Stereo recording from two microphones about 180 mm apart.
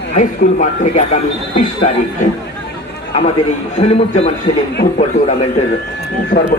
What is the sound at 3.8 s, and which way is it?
A man's voice, 35° left (ahead or behind).